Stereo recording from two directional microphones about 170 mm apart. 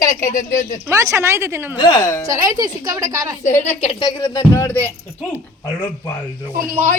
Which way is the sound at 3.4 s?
45° left (ahead or behind).